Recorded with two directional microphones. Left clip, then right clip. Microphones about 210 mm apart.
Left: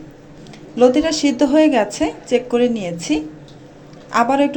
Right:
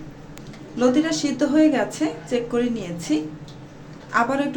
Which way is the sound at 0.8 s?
25° left (ahead or behind).